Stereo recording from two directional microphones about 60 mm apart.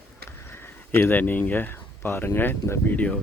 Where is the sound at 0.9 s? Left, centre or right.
Left.